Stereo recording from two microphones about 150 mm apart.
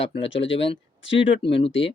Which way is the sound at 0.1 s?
40° left (ahead or behind).